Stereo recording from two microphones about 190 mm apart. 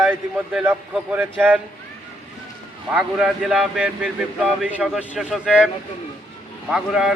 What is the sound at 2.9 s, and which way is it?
Speech, 5° right (ahead or behind).